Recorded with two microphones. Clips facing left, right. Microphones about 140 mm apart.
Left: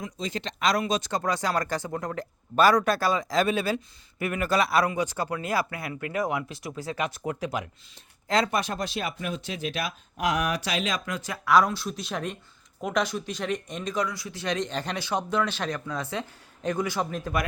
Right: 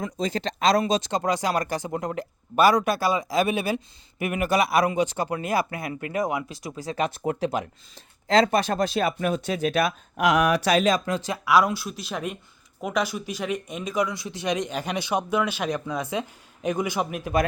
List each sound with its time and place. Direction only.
0.0 s speech: 40° right (ahead or behind); by 6.9 s 15° right (ahead or behind)
6.9 s speech: 30° right (ahead or behind); by 9.8 s 45° right (ahead or behind)
10.2 s speech: 75° right (ahead or behind)
10.7 s speech: 45° right (ahead or behind)
11.4 s speech: 10° right (ahead or behind)